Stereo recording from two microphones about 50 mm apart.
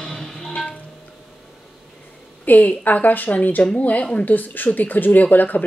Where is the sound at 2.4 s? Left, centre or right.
Left.